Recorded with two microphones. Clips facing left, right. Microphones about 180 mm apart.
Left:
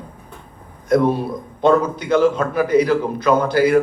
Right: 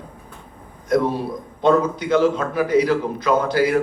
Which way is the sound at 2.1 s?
50° left (ahead or behind).